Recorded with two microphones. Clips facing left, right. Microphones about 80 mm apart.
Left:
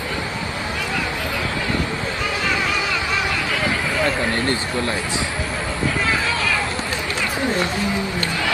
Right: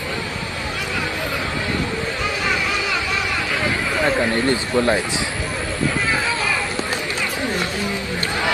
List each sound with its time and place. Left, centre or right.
4.0 s speech: right